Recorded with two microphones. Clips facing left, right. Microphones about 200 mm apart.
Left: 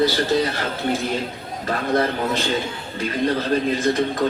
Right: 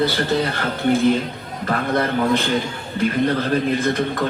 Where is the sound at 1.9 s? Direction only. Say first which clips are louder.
Right 2 dB; 55° right (ahead or behind).